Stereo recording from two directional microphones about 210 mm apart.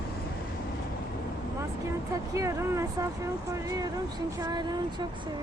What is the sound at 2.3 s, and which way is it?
Speech, 15° right (ahead or behind).